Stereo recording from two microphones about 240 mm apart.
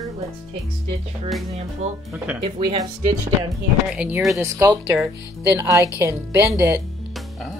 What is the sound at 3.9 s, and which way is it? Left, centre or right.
A woman's voice, centre.